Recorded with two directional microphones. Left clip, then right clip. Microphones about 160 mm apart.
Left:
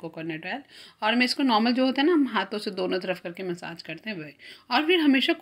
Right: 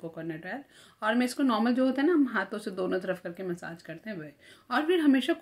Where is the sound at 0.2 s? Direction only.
15° left (ahead or behind).